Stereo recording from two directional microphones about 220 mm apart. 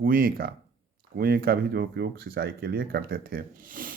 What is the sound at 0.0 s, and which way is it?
Speech, 40° right (ahead or behind).